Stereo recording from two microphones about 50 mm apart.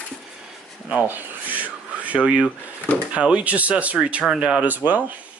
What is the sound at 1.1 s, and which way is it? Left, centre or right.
Rub, right.